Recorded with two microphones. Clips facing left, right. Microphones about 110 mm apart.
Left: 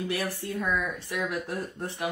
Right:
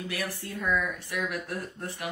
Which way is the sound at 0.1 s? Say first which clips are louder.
Left 4 dB; 20° left (ahead or behind).